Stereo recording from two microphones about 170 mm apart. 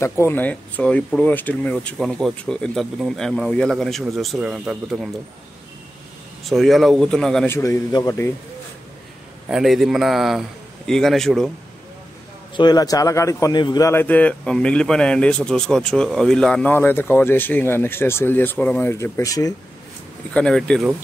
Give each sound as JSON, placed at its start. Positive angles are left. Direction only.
{"t": 0.0, "sound": "speech", "side_deg": 15}
{"t": 6.5, "sound": "speech", "side_deg": 0}
{"t": 7.5, "sound": "a man's voice", "side_deg": 15}
{"t": 9.5, "sound": "speech", "side_deg": 0}
{"t": 12.5, "sound": "a man's voice", "side_deg": 25}
{"t": 20.3, "sound": "speech", "side_deg": 5}